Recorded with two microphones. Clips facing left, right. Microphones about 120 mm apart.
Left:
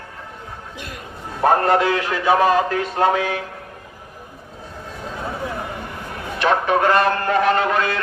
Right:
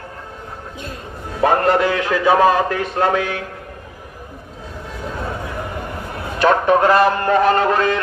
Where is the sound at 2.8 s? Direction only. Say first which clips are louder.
Even; 65° right (ahead or behind).